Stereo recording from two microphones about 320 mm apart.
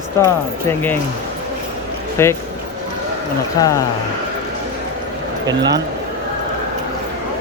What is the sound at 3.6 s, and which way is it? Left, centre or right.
Speech, centre.